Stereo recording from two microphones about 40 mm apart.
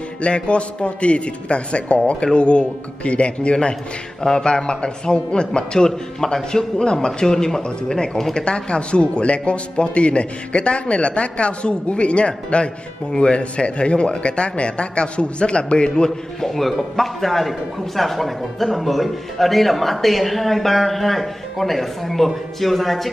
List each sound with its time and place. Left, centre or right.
0.2 s a man's voice: left
4.2 s a man's voice: centre
16.3 s a man's voice: centre